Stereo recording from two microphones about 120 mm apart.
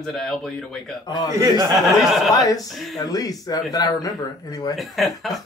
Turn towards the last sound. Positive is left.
turn(degrees=0)  # may be behind; listen again after turning